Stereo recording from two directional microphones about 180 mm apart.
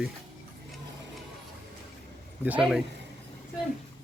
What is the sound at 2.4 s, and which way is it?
Speech, 5° right (ahead or behind).